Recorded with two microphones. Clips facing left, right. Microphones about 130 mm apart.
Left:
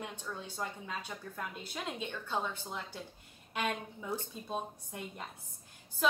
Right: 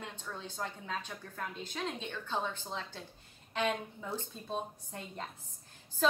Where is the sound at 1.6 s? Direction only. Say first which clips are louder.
Right 2 dB; 10° left (ahead or behind).